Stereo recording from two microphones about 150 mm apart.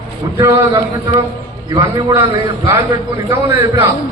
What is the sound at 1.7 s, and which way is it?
Speech, 25° right (ahead or behind).